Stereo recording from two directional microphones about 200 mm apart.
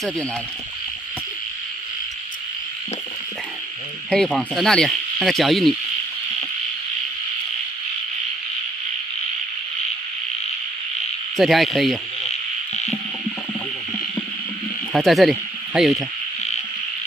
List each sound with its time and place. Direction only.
4.1 s speech: 5° left (ahead or behind)
11.3 s speech: centre (ahead or behind)
12.3 s insect: 35° left (ahead or behind)
14.9 s speech: centre (ahead or behind)